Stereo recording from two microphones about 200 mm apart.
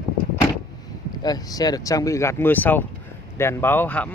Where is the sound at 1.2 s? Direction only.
20° left (ahead or behind).